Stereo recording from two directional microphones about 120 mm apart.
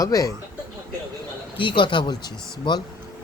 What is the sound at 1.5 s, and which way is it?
Speech, 45° left (ahead or behind).